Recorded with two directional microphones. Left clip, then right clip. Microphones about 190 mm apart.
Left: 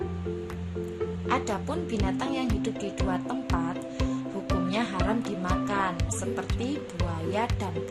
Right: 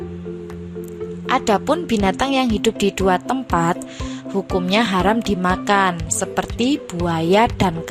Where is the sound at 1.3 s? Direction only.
50° right (ahead or behind).